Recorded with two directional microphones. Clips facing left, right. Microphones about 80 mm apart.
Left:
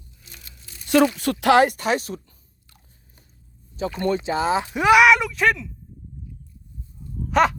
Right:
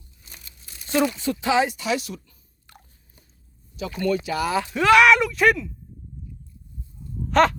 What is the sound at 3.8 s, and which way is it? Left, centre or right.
Speech, left.